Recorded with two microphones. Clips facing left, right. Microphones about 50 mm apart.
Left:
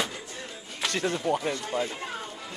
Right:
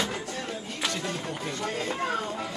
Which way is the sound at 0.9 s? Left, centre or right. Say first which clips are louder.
Left 7 dB; left.